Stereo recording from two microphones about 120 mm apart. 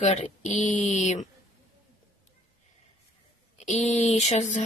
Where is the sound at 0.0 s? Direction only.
70° left (ahead or behind).